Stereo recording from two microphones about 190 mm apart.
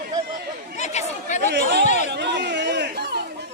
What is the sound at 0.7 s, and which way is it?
Chatter, 40° left (ahead or behind).